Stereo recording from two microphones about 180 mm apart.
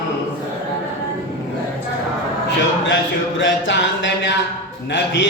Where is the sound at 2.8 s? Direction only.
90° left.